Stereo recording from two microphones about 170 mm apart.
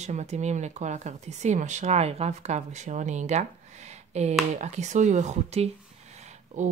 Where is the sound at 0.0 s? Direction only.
40° right (ahead or behind).